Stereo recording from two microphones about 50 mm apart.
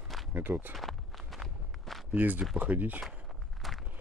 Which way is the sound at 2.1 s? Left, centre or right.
Right.